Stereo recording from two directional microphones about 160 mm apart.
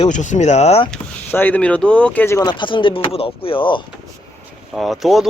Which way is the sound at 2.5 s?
30° left (ahead or behind).